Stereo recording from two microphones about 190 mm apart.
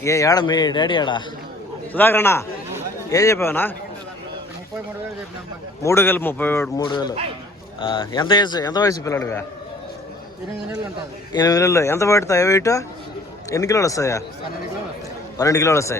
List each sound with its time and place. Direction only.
0.0 s a man's voice: 15° left (ahead or behind)
1.9 s speech: 10° left (ahead or behind)
5.8 s speech: 15° left (ahead or behind)
6.8 s a man's voice: 25° left (ahead or behind)
11.3 s speech: 20° left (ahead or behind)
15.4 s speech: 15° left (ahead or behind)